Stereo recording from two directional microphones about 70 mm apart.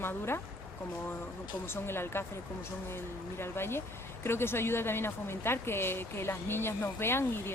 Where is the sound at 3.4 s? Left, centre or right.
Left.